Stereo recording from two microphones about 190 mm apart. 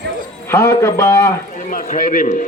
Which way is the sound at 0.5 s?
15° left (ahead or behind).